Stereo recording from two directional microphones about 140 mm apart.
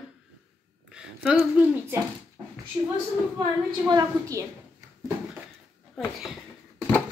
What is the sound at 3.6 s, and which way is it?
Speech, 30° right (ahead or behind).